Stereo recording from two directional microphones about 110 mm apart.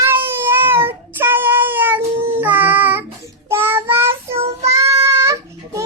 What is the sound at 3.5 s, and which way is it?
Child singing, 20° right (ahead or behind).